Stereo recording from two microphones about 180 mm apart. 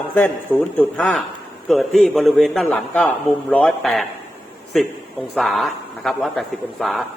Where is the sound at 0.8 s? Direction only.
5° left (ahead or behind).